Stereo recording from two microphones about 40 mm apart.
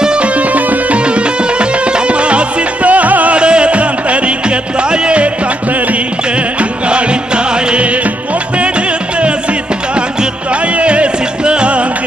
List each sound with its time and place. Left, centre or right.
0.0 s music: right
0.4 s music: right
0.9 s music: right
3.3 s music: right
6.6 s music: right
10.8 s music: right